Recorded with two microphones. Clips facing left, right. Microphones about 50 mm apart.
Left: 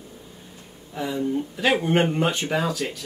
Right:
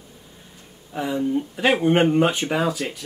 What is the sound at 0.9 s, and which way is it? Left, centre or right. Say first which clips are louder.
Speech: right 2 dB; centre.